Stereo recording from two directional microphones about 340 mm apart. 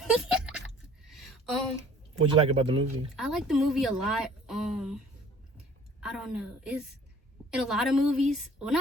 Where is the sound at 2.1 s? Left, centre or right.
Centre.